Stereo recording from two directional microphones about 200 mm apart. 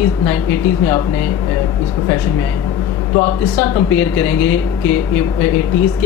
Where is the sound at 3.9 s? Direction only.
10° left (ahead or behind).